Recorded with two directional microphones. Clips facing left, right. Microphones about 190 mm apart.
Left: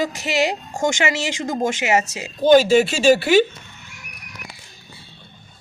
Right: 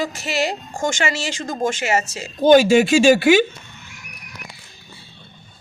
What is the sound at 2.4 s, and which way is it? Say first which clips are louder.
Speech: right 1 dB; 50° right (ahead or behind).